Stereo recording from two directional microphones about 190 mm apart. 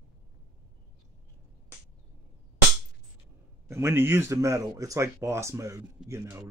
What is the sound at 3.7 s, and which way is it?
Speech, 10° right (ahead or behind).